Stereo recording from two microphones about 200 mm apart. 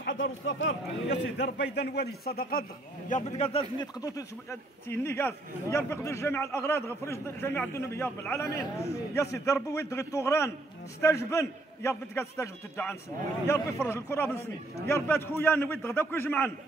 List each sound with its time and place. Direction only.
0.0 s a man's voice: 70° left (ahead or behind)
1.4 s a man's voice: 60° left (ahead or behind)
3.1 s a man's voice: 35° left (ahead or behind)
3.8 s a man's voice: 15° left (ahead or behind)